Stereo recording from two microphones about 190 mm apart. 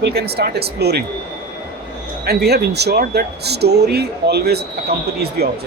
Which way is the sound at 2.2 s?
55° right (ahead or behind).